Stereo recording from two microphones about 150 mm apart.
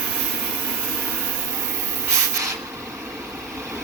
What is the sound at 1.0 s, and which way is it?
Vacuum cleaner, 15° right (ahead or behind).